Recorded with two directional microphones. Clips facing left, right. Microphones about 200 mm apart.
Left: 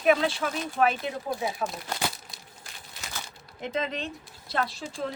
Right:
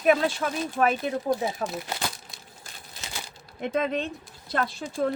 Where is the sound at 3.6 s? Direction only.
55° right (ahead or behind).